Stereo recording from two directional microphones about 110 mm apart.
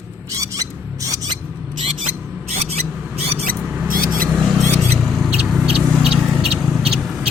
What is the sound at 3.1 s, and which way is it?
Mouse, 65° right (ahead or behind).